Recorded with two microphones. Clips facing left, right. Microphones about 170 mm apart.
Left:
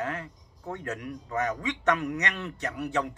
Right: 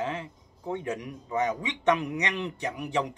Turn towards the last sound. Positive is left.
turn(degrees=-15)  # may be behind; listen again after turning